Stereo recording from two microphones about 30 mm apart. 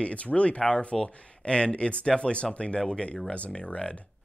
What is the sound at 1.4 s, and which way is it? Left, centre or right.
Speech, left.